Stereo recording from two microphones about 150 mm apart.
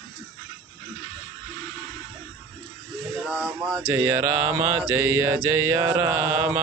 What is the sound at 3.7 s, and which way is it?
Mantra, 15° right (ahead or behind).